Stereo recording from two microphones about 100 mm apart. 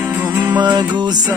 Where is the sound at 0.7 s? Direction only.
45° right (ahead or behind).